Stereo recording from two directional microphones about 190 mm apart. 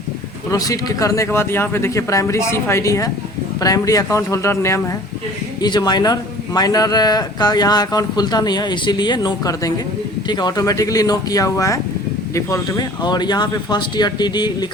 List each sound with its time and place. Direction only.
0.5 s a man's voice: 20° left (ahead or behind)